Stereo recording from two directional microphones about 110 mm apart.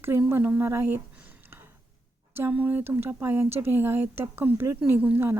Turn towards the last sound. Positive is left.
turn(degrees=-20)  # may be behind; listen again after turning